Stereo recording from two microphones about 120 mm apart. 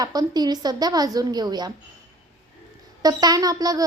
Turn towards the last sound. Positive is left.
turn(degrees=-30)  # may be behind; listen again after turning